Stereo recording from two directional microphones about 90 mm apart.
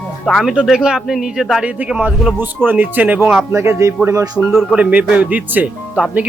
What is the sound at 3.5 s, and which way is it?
Speech, 30° right (ahead or behind).